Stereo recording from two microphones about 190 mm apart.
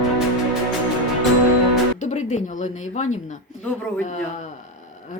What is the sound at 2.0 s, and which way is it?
Speech, 40° left (ahead or behind).